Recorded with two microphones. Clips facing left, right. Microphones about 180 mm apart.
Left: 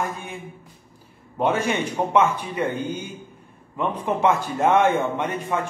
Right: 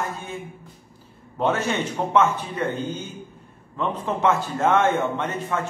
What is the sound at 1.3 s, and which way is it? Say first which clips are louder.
A man's voice: left 1 dB; 10° left (ahead or behind).